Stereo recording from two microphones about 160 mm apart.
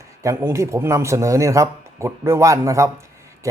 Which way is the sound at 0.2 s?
20° right (ahead or behind).